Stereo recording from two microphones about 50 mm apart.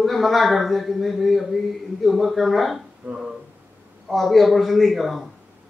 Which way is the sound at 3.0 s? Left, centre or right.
Right.